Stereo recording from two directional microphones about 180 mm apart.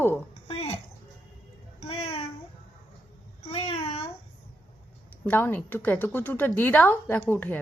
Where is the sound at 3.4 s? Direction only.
35° left (ahead or behind).